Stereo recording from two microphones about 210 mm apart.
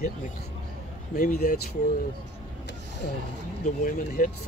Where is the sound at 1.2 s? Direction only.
40° left (ahead or behind).